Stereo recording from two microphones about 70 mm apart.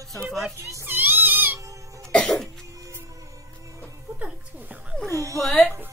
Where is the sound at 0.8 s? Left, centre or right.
Right.